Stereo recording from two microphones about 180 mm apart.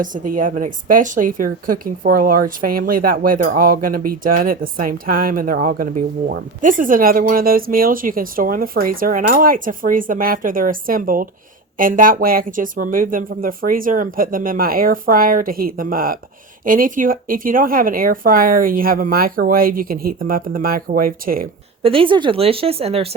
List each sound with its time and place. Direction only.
0.0 s speech: 50° right (ahead or behind)
21.8 s speech: 30° right (ahead or behind)